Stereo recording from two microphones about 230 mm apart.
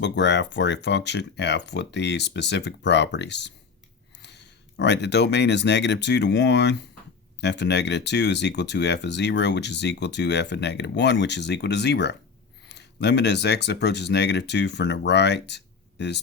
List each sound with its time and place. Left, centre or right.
0.0 s speech: left